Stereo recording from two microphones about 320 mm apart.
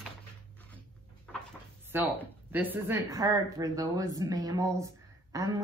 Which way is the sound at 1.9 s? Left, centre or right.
Centre.